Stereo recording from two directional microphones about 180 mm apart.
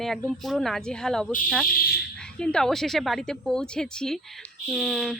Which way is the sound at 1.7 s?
55° left (ahead or behind).